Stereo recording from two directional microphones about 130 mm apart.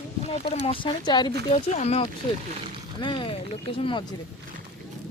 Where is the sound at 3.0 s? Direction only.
40° left (ahead or behind).